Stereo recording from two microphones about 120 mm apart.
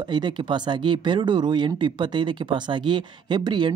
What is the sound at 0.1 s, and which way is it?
Speech, 40° right (ahead or behind).